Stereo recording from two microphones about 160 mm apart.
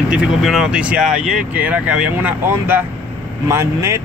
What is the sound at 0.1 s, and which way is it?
Speech, 5° right (ahead or behind).